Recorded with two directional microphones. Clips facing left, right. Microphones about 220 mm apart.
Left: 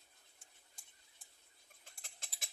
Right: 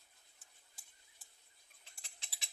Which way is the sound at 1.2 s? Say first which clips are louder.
Left 1 dB; centre (ahead or behind).